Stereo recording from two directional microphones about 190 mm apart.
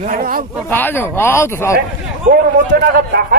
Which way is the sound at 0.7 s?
10° left (ahead or behind).